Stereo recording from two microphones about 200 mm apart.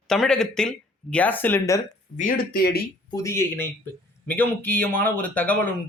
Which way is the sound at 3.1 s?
15° left (ahead or behind).